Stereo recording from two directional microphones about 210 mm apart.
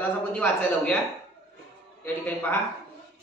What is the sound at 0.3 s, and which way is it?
Speech, 5° left (ahead or behind).